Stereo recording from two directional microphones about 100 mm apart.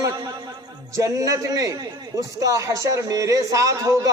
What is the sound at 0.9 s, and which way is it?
A man's voice, 35° right (ahead or behind).